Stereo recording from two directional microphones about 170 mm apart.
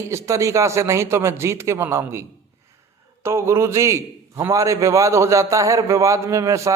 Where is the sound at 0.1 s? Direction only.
15° right (ahead or behind).